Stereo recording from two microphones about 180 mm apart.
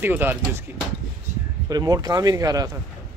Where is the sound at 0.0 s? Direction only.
10° right (ahead or behind).